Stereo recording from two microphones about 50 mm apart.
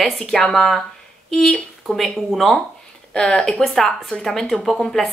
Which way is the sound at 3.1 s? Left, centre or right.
Centre.